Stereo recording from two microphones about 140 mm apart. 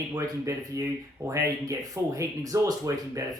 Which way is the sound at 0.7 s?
20° right (ahead or behind).